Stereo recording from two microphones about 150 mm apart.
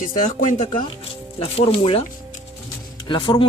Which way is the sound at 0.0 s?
65° left (ahead or behind).